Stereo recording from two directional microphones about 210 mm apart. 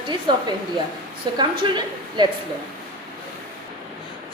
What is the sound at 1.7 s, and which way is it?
Speech, 20° right (ahead or behind).